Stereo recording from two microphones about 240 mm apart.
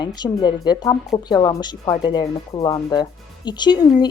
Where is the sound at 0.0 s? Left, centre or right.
Centre.